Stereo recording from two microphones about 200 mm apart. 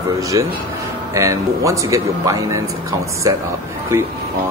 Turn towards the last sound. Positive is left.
turn(degrees=-15)  # may be behind; listen again after turning